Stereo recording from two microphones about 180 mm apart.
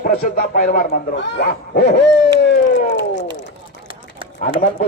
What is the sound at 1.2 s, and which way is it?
Hoot, 75° left (ahead or behind).